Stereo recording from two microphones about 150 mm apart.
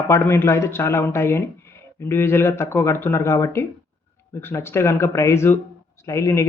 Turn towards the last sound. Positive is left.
turn(degrees=20)  # may be behind; listen again after turning